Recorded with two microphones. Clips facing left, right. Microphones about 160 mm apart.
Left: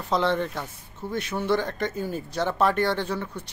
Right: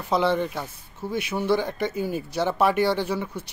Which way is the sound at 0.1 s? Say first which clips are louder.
Right 2 dB; 5° right (ahead or behind).